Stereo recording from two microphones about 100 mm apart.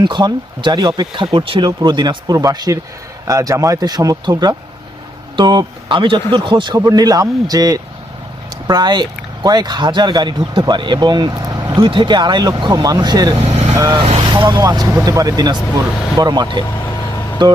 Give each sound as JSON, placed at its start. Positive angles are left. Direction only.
{"t": 0.0, "sound": "speech", "side_deg": -50}
{"t": 6.7, "sound": "speech", "side_deg": -35}
{"t": 11.9, "sound": "speech", "side_deg": -50}
{"t": 13.4, "sound": "vehicle", "side_deg": -90}
{"t": 13.9, "sound": "speech", "side_deg": -60}
{"t": 14.5, "sound": "speech", "side_deg": -40}